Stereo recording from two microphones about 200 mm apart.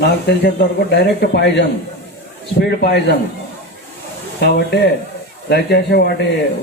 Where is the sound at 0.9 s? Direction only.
55° left (ahead or behind).